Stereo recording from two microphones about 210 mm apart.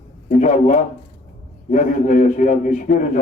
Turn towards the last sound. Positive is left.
turn(degrees=40)  # may be behind; listen again after turning